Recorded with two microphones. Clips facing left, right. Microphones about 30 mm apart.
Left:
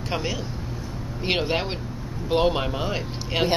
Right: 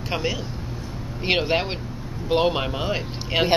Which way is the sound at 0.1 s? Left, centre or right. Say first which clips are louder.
Right 2 dB; centre.